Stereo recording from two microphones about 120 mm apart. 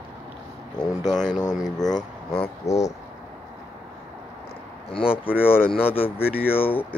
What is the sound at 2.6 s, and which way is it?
Speech, 70° left (ahead or behind).